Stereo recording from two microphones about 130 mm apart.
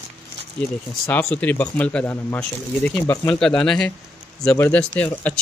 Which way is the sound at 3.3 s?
5° left (ahead or behind).